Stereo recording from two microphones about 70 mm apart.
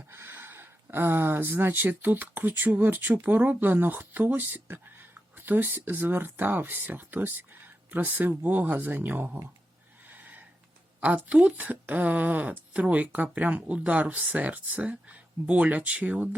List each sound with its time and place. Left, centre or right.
0.1 s speech: right
10.1 s a sound: right
11.0 s speech: centre